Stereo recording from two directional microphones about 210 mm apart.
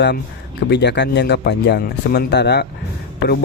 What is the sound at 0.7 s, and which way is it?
Speech, 55° left (ahead or behind).